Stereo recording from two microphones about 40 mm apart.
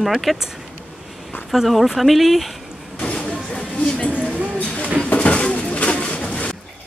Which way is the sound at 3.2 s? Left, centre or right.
Centre.